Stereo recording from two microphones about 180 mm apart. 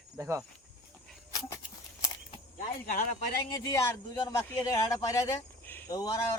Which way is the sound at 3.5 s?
20° left (ahead or behind).